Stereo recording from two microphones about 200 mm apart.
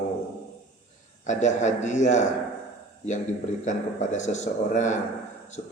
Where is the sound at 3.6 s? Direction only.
35° left (ahead or behind).